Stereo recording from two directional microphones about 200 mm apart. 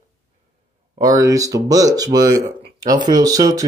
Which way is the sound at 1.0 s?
15° right (ahead or behind).